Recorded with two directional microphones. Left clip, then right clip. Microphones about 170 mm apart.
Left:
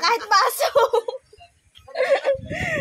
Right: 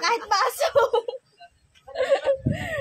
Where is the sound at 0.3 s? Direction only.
25° left (ahead or behind).